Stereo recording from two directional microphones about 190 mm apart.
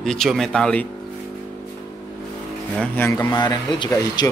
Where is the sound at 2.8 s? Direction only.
10° left (ahead or behind).